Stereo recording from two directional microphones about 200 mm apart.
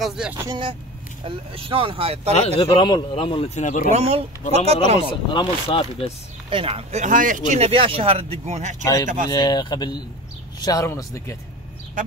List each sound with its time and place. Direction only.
0.0 s speech: 5° right (ahead or behind)
0.5 s speech: 25° right (ahead or behind)
2.3 s a man's voice: 25° left (ahead or behind)
3.9 s speech: 30° right (ahead or behind)
5.3 s a man's voice: 25° left (ahead or behind)
6.5 s speech: 30° right (ahead or behind)
9.3 s a man's voice: 20° left (ahead or behind)